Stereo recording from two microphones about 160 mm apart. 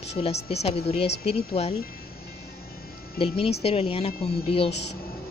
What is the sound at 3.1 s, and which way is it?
Speech, 35° left (ahead or behind).